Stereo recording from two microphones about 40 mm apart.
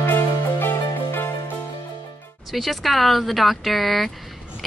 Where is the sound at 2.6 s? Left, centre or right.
Centre.